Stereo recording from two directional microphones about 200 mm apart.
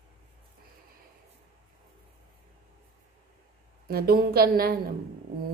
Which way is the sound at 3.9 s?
50° right (ahead or behind).